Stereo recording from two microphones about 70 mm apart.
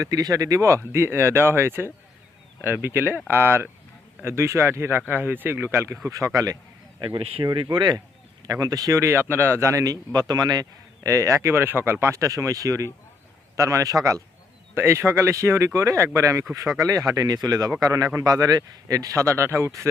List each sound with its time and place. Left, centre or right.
0.0 s speech: right
6.1 s speech: right
9.0 s speech: right
11.0 s speech: right
14.8 s speech: right
16.6 s speech: right